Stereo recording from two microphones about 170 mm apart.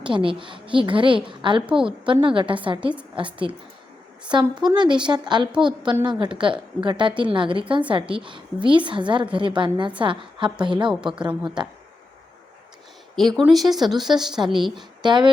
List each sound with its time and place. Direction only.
0.0 s a woman's voice: 30° right (ahead or behind)
1.6 s speech: 5° right (ahead or behind)
2.2 s a woman's voice: 30° right (ahead or behind)
4.3 s a woman's voice: 25° right (ahead or behind)
13.1 s speech: centre (ahead or behind)
14.8 s speech: 25° right (ahead or behind)